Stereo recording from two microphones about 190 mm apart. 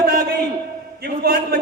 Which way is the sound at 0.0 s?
55° right (ahead or behind).